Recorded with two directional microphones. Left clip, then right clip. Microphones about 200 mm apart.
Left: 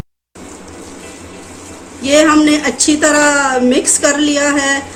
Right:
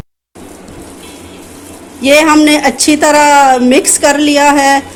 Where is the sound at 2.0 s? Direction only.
35° right (ahead or behind).